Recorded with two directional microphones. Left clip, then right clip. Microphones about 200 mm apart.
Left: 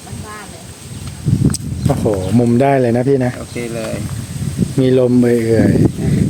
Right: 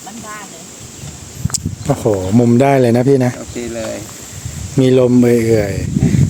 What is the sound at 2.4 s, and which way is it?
Speech, 15° right (ahead or behind).